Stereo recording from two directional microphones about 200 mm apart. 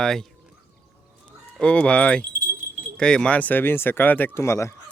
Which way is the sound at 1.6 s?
5° left (ahead or behind).